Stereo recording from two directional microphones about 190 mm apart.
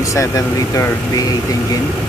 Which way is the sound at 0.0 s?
15° left (ahead or behind).